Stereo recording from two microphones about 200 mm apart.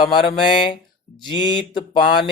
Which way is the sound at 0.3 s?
25° left (ahead or behind).